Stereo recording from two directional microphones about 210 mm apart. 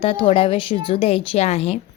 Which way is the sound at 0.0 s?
25° left (ahead or behind).